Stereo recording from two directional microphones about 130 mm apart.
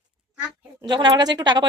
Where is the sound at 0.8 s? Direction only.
35° right (ahead or behind).